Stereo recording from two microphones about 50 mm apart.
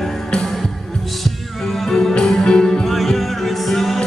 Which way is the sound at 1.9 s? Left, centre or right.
Centre.